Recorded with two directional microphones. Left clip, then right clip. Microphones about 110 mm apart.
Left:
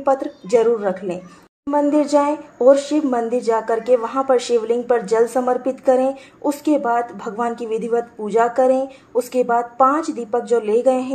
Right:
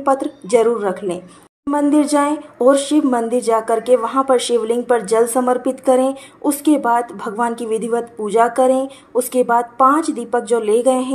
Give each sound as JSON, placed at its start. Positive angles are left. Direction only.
{"t": 0.0, "sound": "speech", "side_deg": -20}